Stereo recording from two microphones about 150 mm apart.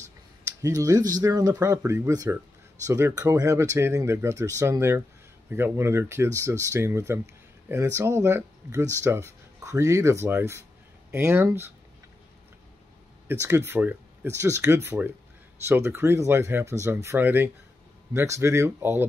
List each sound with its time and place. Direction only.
0.6 s speech: 20° right (ahead or behind)
13.3 s speech: 15° right (ahead or behind)